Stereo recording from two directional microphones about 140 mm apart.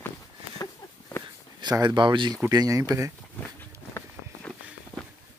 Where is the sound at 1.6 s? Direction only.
30° right (ahead or behind).